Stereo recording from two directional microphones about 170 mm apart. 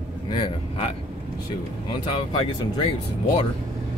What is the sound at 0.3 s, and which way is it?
Speech, 35° left (ahead or behind).